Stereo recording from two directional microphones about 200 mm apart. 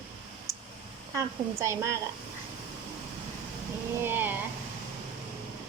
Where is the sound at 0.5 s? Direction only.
15° right (ahead or behind).